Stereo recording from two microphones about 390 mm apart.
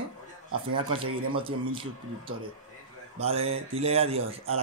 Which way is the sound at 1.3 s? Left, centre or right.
Centre.